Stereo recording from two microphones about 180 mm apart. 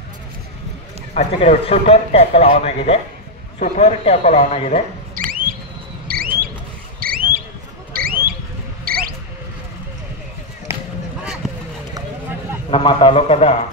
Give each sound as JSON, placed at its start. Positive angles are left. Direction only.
{"t": 1.1, "sound": "speech", "side_deg": 35}
{"t": 5.1, "sound": "a sound", "side_deg": -50}
{"t": 10.7, "sound": "basketball bounce", "side_deg": -15}
{"t": 12.7, "sound": "speech", "side_deg": 30}